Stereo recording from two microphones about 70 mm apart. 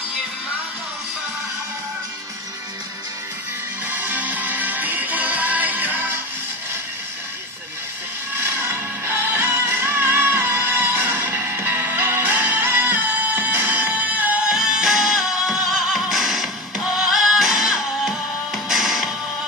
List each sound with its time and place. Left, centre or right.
3.8 s music: right
8.4 s music: right
14.4 s music: centre